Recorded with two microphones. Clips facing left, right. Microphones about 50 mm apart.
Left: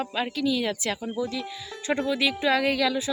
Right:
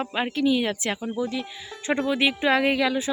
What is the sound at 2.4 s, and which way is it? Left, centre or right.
Speech, right.